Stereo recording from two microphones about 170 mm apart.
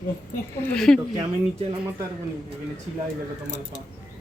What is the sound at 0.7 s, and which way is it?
Speech, 5° left (ahead or behind).